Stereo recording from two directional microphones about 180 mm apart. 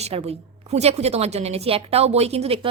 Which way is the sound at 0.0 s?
35° right (ahead or behind).